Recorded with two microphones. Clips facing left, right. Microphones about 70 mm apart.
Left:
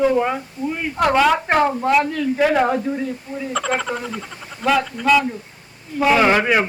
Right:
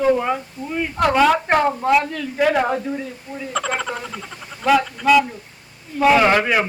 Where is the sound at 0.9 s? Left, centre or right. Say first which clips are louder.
Even; centre.